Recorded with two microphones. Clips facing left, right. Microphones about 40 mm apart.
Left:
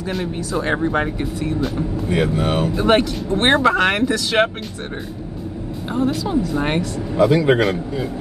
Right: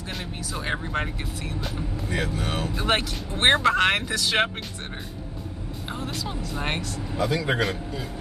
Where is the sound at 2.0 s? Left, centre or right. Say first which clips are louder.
Left 9 dB; left.